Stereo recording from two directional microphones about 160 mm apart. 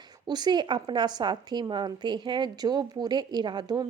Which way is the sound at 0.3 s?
25° right (ahead or behind).